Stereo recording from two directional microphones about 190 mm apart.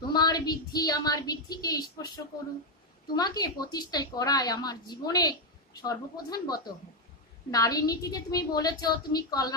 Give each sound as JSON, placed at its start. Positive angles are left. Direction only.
{"t": 0.1, "sound": "a woman's voice", "side_deg": 20}